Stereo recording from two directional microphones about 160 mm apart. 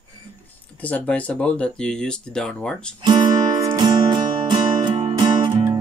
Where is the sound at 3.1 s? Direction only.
25° right (ahead or behind).